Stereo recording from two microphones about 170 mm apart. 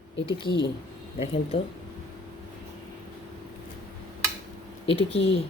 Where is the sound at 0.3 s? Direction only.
30° left (ahead or behind).